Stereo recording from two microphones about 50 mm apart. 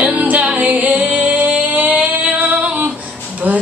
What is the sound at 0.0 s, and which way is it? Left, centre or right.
Music, right.